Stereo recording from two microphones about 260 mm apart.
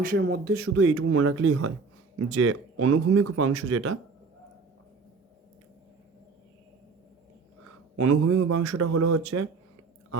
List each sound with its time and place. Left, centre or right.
0.2 s speech: right
0.8 s speech: right
7.9 s speech: right